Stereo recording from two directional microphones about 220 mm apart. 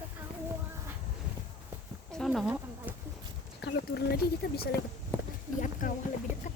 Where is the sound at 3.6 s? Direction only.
45° left (ahead or behind).